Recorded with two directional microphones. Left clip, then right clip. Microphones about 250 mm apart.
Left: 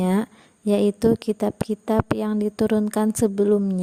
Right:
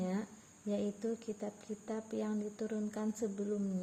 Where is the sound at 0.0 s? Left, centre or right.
Left.